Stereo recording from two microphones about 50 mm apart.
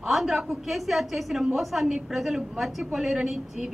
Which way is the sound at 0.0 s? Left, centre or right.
Centre.